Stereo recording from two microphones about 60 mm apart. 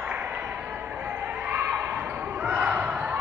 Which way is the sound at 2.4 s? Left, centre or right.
Centre.